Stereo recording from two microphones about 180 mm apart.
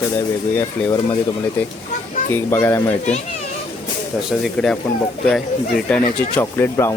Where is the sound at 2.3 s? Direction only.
15° left (ahead or behind).